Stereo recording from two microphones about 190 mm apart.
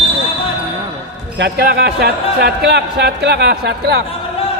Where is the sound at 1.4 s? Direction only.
60° right (ahead or behind).